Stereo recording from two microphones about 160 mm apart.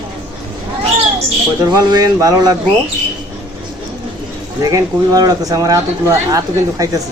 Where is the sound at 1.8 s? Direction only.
25° right (ahead or behind).